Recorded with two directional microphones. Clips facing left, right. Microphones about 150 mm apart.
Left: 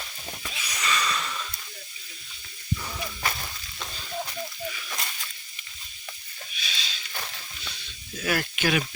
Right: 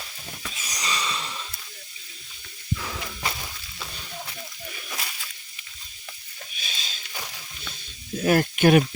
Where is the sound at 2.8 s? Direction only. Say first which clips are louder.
Right 1 dB; 90° right.